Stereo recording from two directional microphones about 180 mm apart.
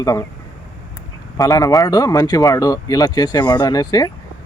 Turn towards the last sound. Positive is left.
turn(degrees=20)  # may be behind; listen again after turning